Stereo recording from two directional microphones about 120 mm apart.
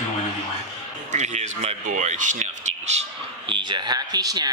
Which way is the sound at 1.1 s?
75° right (ahead or behind).